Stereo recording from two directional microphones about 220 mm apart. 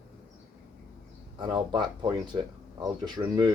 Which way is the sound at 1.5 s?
20° right (ahead or behind).